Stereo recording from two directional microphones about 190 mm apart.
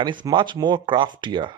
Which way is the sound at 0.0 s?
25° right (ahead or behind).